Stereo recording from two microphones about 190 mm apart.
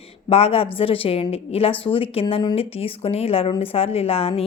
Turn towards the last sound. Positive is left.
turn(degrees=30)  # may be behind; listen again after turning